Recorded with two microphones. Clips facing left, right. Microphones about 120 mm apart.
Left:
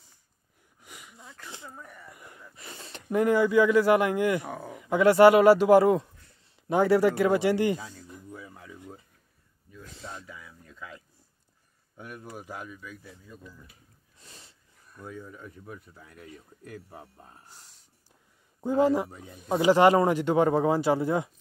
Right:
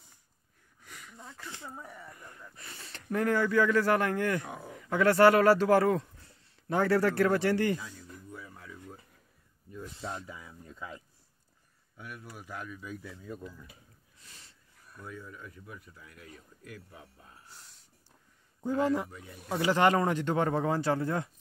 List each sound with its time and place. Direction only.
0.7 s sniff: 15° left (ahead or behind)
2.0 s speech: 10° left (ahead or behind)
8.1 s a sound: 20° left (ahead or behind)
10.2 s a sound: 20° right (ahead or behind)
12.0 s speech: 35° left (ahead or behind)
14.2 s sniff: 25° left (ahead or behind)
15.0 s speech: 30° left (ahead or behind)
18.6 s speech: 30° left (ahead or behind)
19.7 s speech: 15° left (ahead or behind)